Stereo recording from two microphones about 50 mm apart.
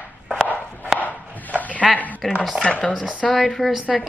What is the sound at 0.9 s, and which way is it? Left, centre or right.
Chopping, left.